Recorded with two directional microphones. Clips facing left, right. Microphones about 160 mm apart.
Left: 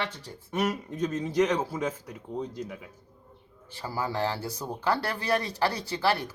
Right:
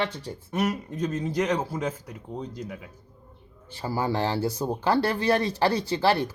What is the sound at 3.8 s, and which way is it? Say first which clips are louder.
Speech: right 3 dB; 30° right (ahead or behind).